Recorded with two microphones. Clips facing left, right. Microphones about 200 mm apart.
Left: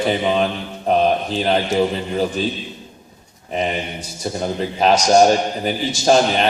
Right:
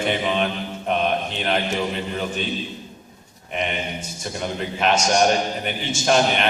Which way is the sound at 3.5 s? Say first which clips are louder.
Left 4 dB; 35° left (ahead or behind).